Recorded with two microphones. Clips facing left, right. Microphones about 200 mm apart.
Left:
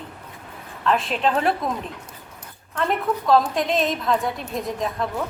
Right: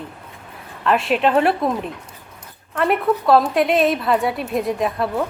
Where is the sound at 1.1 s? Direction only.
70° right (ahead or behind).